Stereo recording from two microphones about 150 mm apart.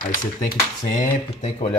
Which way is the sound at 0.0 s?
65° left (ahead or behind).